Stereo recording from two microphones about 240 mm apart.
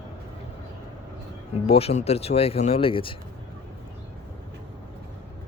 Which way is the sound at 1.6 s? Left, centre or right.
Left.